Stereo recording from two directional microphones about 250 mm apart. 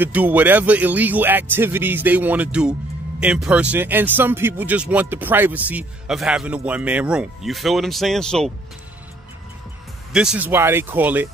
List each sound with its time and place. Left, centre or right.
0.0 s speech: centre
10.1 s speech: centre